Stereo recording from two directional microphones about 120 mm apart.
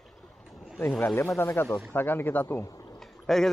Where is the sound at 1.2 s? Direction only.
25° left (ahead or behind).